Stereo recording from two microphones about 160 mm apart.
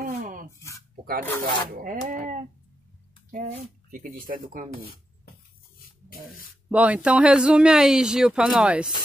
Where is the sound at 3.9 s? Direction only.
60° right (ahead or behind).